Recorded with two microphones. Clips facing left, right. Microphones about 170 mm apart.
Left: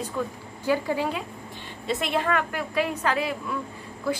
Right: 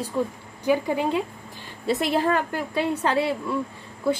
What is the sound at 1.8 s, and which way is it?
A woman's voice, 35° right (ahead or behind).